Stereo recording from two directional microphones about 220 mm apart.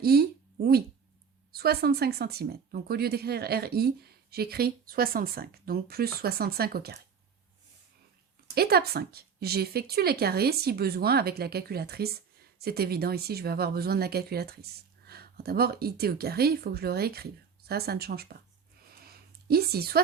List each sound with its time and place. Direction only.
0.0 s speech: 45° right (ahead or behind)
8.5 s speech: 45° right (ahead or behind)
18.9 s a sound: 45° right (ahead or behind)